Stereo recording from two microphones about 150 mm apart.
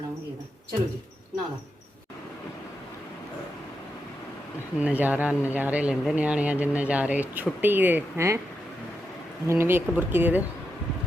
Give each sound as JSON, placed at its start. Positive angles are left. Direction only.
{"t": 4.8, "sound": "speech", "side_deg": -10}
{"t": 9.5, "sound": "speech", "side_deg": -15}